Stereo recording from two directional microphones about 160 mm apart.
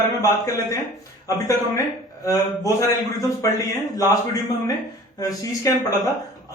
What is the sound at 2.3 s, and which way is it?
A man's voice, 20° left (ahead or behind).